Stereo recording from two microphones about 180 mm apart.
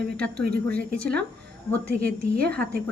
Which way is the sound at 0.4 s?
60° right (ahead or behind).